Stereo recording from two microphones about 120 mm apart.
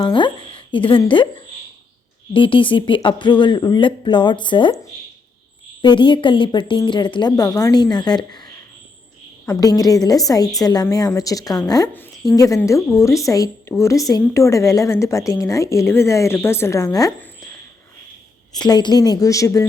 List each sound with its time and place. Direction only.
0.0 s speech: 40° left (ahead or behind)
2.3 s speech: 45° left (ahead or behind)
5.8 s a woman's voice: 40° left (ahead or behind)
9.5 s a woman's voice: 30° left (ahead or behind)
18.5 s a woman's voice: 35° left (ahead or behind)